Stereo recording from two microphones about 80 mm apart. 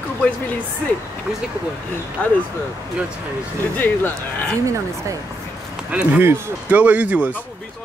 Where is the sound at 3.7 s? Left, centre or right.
Left.